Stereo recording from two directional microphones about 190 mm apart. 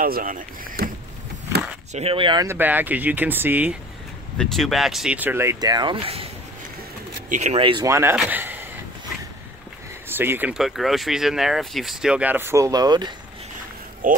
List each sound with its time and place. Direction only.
0.0 s speech: 50° right (ahead or behind)
2.0 s speech: 30° right (ahead or behind)
2.4 s speech: 10° right (ahead or behind)
4.4 s speech: centre (ahead or behind); by 6.2 s 30° right (ahead or behind)
7.2 s a man's voice: 40° right (ahead or behind); by 8.6 s 10° right (ahead or behind)
10.0 s speech: 10° right (ahead or behind)
14.0 s speech: 45° right (ahead or behind)